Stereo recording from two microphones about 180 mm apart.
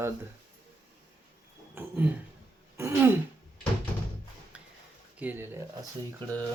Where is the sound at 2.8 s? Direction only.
15° right (ahead or behind).